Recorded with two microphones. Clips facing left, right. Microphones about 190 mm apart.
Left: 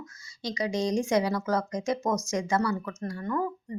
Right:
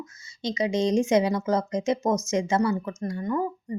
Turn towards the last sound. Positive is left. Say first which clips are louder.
# right 3 dB
turn(degrees=-15)  # may be behind; listen again after turning